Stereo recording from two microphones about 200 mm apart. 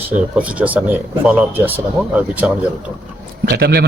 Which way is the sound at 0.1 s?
5° right (ahead or behind).